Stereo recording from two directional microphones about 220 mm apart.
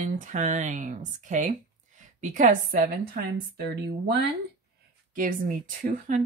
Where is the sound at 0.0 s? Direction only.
35° right (ahead or behind).